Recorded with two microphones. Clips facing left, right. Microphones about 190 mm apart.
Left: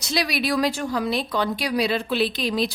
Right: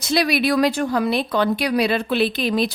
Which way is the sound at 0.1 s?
55° right (ahead or behind).